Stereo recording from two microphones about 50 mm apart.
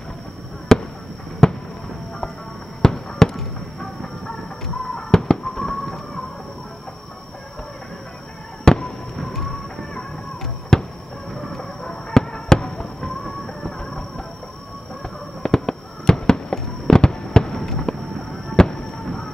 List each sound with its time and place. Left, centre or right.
0.7 s basketball bounce: centre
1.4 s fireworks: centre
2.8 s fireworks: centre
8.7 s fireworks: centre
9.2 s music: centre
9.8 s a sound: centre
11.3 s fireworks: centre
15.4 s fireworks: centre